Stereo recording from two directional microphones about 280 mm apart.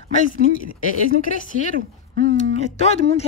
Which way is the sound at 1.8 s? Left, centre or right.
Right.